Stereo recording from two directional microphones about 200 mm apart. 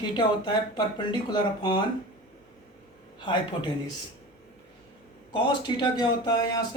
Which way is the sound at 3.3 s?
25° left (ahead or behind).